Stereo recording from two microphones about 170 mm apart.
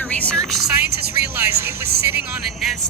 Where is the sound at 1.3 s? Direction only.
15° right (ahead or behind).